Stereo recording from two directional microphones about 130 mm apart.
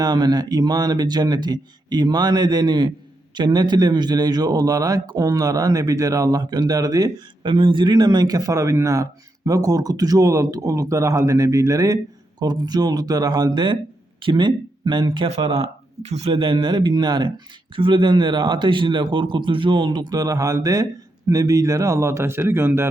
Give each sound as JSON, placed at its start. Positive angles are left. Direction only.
{"t": 0.0, "sound": "a man's voice", "side_deg": -30}
{"t": 16.0, "sound": "a man's voice", "side_deg": -55}